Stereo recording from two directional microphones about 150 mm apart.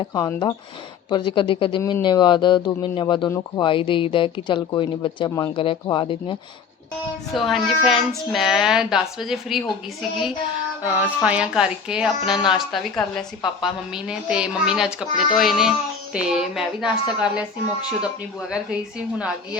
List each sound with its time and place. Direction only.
0.1 s speech: 25° left (ahead or behind)
3.2 s speech: 20° left (ahead or behind)
3.6 s speech: 35° left (ahead or behind)
7.3 s speech: centre (ahead or behind)